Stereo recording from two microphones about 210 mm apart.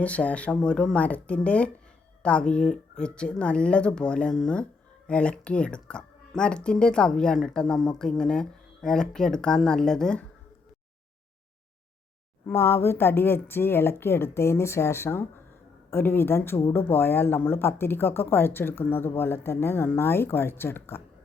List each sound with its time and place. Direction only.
0.0 s speech: 5° left (ahead or behind)
12.5 s speech: 10° left (ahead or behind)